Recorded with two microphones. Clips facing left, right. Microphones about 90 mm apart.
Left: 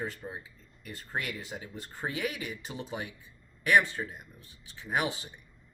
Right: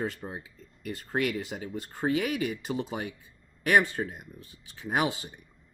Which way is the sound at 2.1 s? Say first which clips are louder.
Right 8 dB; 65° right (ahead or behind).